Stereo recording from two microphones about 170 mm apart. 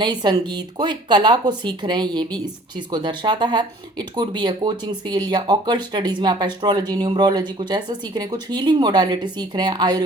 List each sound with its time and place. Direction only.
0.0 s speech: 25° right (ahead or behind)